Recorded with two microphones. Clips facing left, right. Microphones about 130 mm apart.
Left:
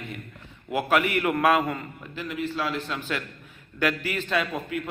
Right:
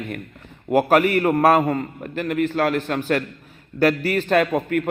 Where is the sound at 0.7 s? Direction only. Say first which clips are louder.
Right 7 dB; 45° right (ahead or behind).